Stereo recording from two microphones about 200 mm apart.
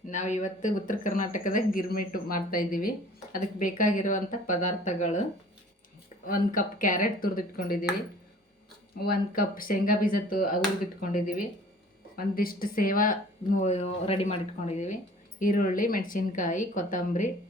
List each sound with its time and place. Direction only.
0.1 s speech: 35° left (ahead or behind)
6.2 s speech: 45° left (ahead or behind)
9.0 s speech: 45° left (ahead or behind)